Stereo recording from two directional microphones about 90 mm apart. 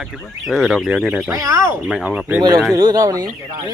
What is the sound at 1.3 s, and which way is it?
Speech, 35° right (ahead or behind).